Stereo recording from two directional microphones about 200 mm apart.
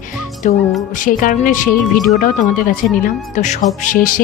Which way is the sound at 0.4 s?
40° left (ahead or behind).